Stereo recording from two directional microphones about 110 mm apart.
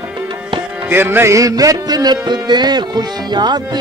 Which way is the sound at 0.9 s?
20° right (ahead or behind).